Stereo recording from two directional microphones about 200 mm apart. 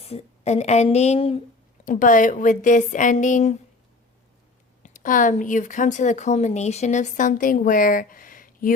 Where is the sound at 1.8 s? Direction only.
40° left (ahead or behind).